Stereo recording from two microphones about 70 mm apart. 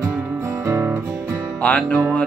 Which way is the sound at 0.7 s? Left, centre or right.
Right.